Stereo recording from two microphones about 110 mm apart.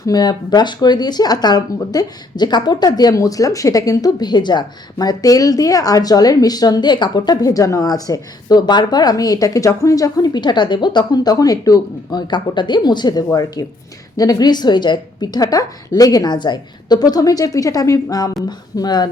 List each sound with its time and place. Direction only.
0.0 s speech: 35° left (ahead or behind)